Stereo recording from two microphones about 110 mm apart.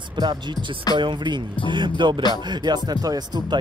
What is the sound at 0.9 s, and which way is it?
Music, 45° right (ahead or behind).